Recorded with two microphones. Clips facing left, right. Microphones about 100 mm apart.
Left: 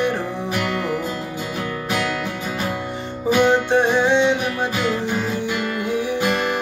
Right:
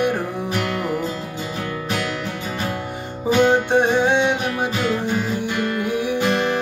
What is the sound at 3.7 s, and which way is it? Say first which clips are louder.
Music: even; 15° right (ahead or behind).